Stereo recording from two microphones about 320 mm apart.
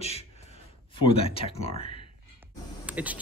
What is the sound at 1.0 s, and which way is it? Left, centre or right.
Speech, centre.